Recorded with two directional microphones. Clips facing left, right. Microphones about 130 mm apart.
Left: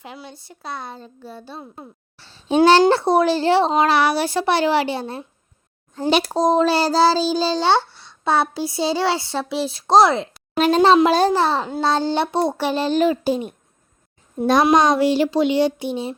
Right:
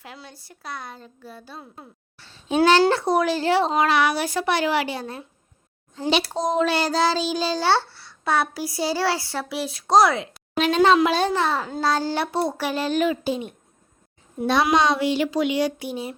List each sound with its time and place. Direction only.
0.0 s a child's voice: 20° left (ahead or behind)
6.0 s a child's voice: 45° left (ahead or behind); by 16.1 s 25° left (ahead or behind)